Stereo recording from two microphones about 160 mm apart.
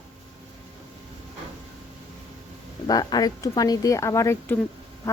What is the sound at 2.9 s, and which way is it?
Speech, 25° left (ahead or behind).